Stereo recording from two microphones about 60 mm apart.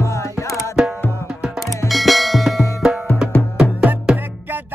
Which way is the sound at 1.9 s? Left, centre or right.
Centre.